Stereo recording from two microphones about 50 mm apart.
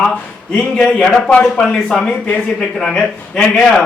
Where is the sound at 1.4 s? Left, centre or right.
Centre.